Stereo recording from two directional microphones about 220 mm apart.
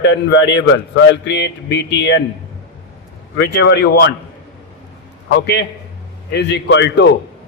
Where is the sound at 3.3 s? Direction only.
55° left (ahead or behind).